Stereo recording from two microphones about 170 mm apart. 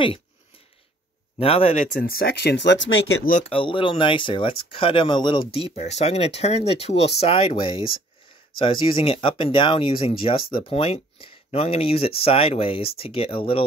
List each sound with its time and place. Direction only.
1.4 s speech: 35° left (ahead or behind)
2.0 s speech: 60° left (ahead or behind); by 2.9 s 90° left
3.4 s speech: 30° left (ahead or behind)